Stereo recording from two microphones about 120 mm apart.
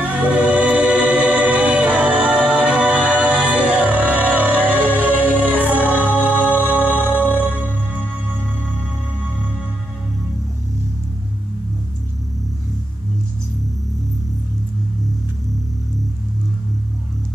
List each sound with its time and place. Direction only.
0.0 s music: 15° right (ahead or behind)
6.8 s music: 15° left (ahead or behind)